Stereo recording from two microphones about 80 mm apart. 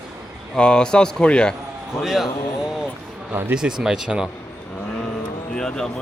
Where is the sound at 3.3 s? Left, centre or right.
Right.